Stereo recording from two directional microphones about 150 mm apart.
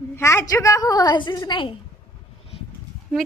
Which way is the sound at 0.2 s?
20° left (ahead or behind).